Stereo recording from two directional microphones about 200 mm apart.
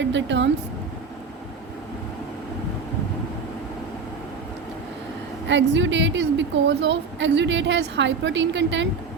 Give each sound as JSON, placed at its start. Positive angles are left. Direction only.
{"t": 0.0, "sound": "a woman's voice", "side_deg": -65}
{"t": 5.5, "sound": "a woman's voice", "side_deg": -65}